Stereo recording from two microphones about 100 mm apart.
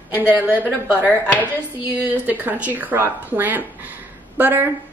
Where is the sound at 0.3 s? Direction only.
15° right (ahead or behind).